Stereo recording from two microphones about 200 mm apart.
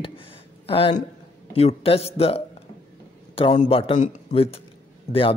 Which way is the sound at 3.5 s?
35° left (ahead or behind).